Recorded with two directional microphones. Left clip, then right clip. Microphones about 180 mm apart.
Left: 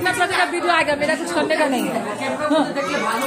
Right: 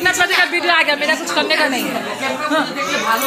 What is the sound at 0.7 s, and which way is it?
A woman's voice, 15° left (ahead or behind).